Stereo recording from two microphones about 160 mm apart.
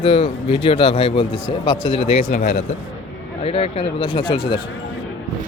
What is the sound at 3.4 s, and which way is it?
Speech, 35° left (ahead or behind).